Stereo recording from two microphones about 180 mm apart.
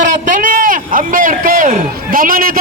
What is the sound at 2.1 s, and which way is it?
Speech, 50° right (ahead or behind).